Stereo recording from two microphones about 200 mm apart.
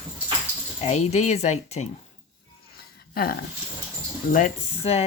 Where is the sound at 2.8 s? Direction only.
50° left (ahead or behind).